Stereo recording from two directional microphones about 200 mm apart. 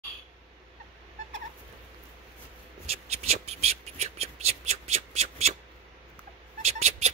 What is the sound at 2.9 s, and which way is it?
Whispering, 30° right (ahead or behind).